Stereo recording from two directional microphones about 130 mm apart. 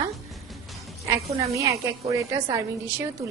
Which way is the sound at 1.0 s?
25° right (ahead or behind).